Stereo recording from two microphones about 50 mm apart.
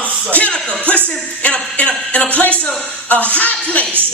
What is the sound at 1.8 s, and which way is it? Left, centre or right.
Speech, left.